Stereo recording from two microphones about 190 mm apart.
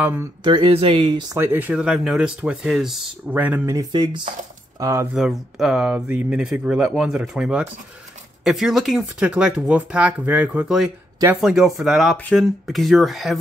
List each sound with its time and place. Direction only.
0.0 s speech: 10° right (ahead or behind)
0.4 s speech: 25° right (ahead or behind)
1.4 s speech: 10° right (ahead or behind)
3.9 s speech: 25° right (ahead or behind)
5.1 s speech: centre (ahead or behind)